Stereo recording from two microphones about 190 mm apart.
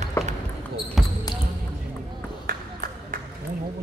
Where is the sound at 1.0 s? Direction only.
Centre (ahead or behind).